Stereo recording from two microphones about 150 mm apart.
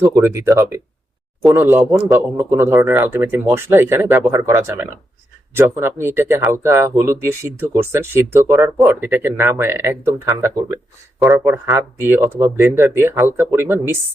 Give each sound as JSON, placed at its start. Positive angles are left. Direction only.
{"t": 0.0, "sound": "speech", "side_deg": -15}